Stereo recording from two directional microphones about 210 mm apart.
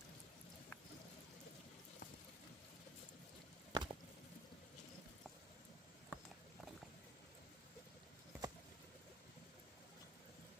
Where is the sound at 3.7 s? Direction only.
20° right (ahead or behind).